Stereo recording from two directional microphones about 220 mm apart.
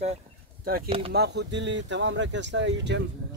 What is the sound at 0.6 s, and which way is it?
Speech, 40° right (ahead or behind).